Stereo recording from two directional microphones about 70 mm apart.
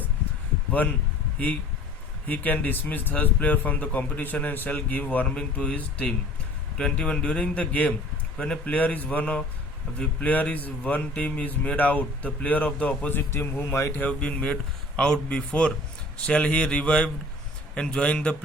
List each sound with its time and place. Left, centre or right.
2.2 s speech: left
13.1 s a man's voice: left
14.0 s speech: centre